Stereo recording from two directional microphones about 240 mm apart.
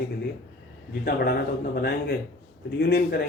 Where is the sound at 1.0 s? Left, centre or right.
Left.